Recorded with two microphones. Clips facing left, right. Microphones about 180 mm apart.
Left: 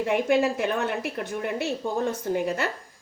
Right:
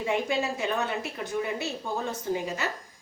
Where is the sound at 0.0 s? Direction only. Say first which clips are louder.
Left 5 dB; 60° left (ahead or behind).